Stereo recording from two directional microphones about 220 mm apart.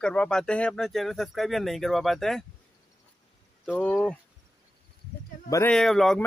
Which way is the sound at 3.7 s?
Centre (ahead or behind).